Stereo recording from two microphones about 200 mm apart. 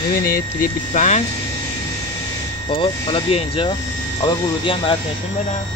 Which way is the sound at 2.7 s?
25° left (ahead or behind).